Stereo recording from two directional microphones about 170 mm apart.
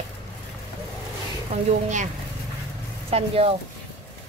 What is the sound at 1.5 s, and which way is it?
Speech, 45° right (ahead or behind).